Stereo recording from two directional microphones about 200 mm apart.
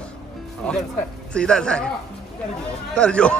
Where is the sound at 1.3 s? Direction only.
5° left (ahead or behind).